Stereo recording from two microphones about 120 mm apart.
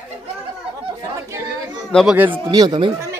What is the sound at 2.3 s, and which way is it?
Speech, 35° right (ahead or behind).